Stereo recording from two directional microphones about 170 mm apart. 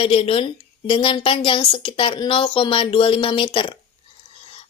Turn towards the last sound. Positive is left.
turn(degrees=30)  # may be behind; listen again after turning